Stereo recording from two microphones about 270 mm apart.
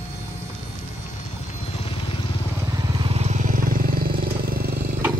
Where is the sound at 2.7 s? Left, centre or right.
Centre.